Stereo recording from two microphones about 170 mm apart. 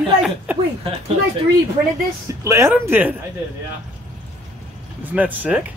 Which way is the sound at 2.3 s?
15° right (ahead or behind).